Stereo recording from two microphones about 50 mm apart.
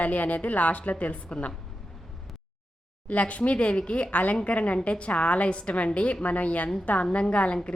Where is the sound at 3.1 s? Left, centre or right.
Left.